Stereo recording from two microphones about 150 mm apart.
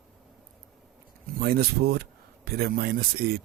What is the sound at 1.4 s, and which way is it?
Speech, 90° right.